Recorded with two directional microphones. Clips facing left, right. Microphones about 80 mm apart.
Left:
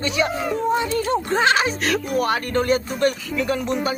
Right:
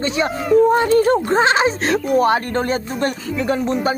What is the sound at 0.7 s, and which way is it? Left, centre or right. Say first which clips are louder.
Speech: right 7 dB; right.